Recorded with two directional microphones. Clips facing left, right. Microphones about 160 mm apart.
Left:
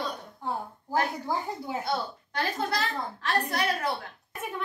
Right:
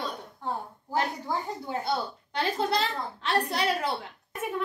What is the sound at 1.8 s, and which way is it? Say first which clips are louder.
A child's voice: right 1 dB; 25° right (ahead or behind).